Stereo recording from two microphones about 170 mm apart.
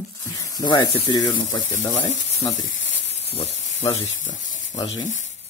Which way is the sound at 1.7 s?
45° left (ahead or behind).